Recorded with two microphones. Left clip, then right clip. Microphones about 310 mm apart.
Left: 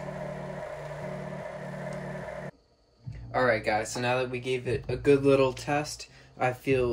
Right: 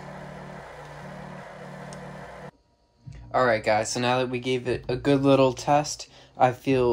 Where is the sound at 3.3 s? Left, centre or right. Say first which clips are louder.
Right 4 dB; centre.